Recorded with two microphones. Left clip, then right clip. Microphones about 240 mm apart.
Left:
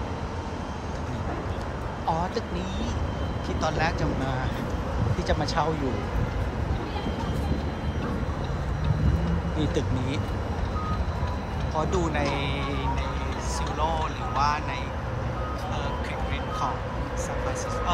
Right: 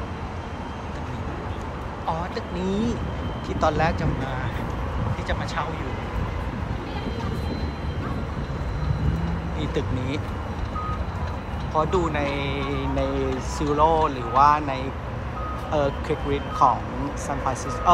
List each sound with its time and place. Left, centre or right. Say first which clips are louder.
2.7 s speech: right 5 dB; centre
5.3 s speech: left 3 dB; centre
9.6 s speech: right 1 dB; centre
11.7 s speech: right 5 dB; centre
17.9 s speech: right 11 dB; centre